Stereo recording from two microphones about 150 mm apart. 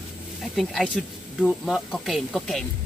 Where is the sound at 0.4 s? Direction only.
Centre (ahead or behind).